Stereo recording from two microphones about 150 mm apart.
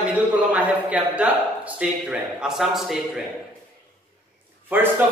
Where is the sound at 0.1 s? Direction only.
10° right (ahead or behind).